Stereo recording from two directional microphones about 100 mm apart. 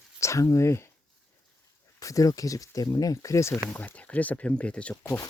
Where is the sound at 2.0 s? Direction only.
35° left (ahead or behind).